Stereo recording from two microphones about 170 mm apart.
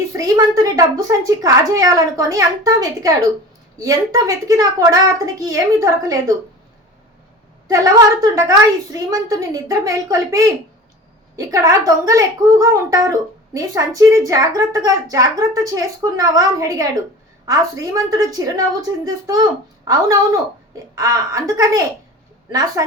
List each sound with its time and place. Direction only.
0.1 s a woman's voice: 20° right (ahead or behind)
7.7 s a woman's voice: 20° right (ahead or behind)
22.8 s a woman's voice: 20° right (ahead or behind)